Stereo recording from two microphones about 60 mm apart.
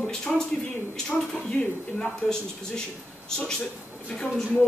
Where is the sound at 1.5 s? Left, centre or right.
Centre.